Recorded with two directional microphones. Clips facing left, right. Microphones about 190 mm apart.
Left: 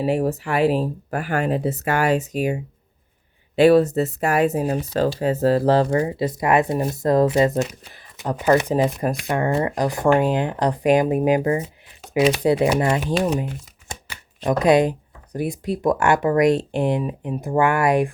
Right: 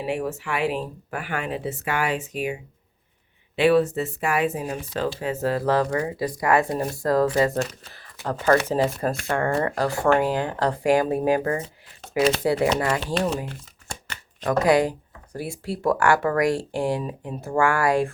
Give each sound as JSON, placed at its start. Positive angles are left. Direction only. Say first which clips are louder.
{"t": 0.0, "sound": "speech", "louder": "left 6 dB", "side_deg": 35}
{"t": 11.6, "sound": "shuffling cards", "louder": "left 2 dB", "side_deg": 0}
{"t": 12.3, "sound": "speech", "louder": "left 3 dB", "side_deg": 20}